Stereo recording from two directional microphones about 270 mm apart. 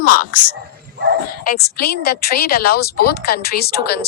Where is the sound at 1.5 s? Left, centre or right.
Left.